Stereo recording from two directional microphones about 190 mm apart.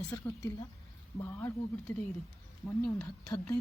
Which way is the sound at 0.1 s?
20° left (ahead or behind).